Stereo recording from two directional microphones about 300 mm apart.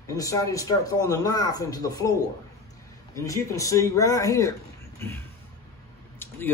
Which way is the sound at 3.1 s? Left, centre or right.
Centre.